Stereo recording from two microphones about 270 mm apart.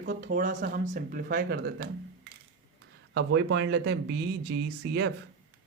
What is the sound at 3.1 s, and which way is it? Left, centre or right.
Speech, right.